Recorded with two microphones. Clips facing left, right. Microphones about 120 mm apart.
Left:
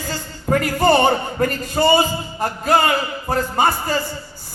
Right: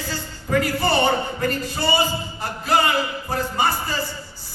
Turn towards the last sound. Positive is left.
turn(degrees=50)  # may be behind; listen again after turning